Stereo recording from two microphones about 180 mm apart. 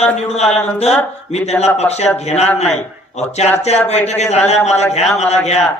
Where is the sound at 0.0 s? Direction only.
35° left (ahead or behind).